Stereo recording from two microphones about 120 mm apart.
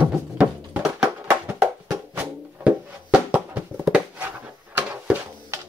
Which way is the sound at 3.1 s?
10° right (ahead or behind).